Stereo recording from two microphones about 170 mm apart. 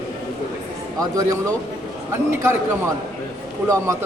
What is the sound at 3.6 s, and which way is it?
Speech, 20° right (ahead or behind).